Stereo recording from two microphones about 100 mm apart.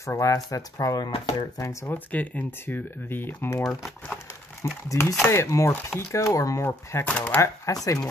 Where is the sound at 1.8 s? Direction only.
15° left (ahead or behind).